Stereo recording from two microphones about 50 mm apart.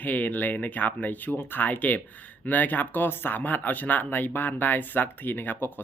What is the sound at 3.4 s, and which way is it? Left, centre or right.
Speech, left.